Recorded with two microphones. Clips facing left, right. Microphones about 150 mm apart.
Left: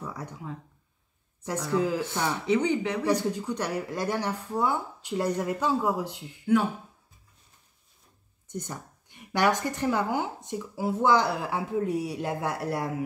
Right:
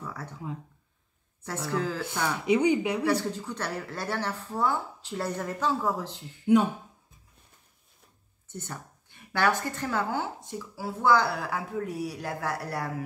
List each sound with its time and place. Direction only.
0.0 s speech: 15° left (ahead or behind)
1.7 s speech: 15° left (ahead or behind)
2.4 s speech: 10° right (ahead or behind)
3.1 s speech: 15° left (ahead or behind)
6.4 s speech: 20° right (ahead or behind)
8.5 s a woman's voice: 15° left (ahead or behind)